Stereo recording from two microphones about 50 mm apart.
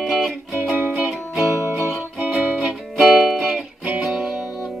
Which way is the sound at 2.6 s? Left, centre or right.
Centre.